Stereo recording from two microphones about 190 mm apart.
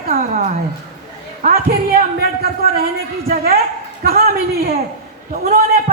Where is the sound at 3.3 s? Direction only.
55° right (ahead or behind).